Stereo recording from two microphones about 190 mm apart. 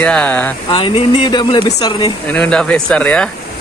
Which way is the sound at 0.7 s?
25° left (ahead or behind).